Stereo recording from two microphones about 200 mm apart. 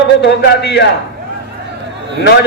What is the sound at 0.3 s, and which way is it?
Speech, 60° left (ahead or behind).